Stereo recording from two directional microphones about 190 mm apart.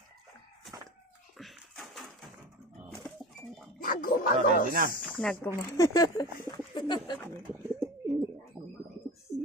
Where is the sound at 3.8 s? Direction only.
45° left (ahead or behind).